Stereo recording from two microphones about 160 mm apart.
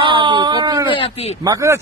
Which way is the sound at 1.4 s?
20° right (ahead or behind).